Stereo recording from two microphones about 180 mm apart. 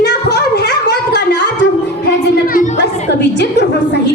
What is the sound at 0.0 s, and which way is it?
Gargling, 65° left (ahead or behind).